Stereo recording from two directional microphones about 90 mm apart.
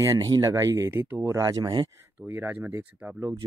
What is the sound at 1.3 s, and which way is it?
Speech, 35° right (ahead or behind).